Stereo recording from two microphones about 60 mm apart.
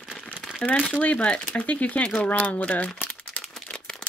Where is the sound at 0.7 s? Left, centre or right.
Left.